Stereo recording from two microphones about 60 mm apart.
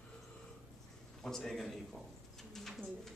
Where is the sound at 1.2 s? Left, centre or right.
Centre.